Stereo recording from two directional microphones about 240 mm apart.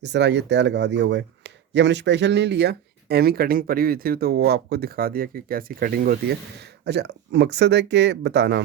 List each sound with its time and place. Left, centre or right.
0.0 s speech: right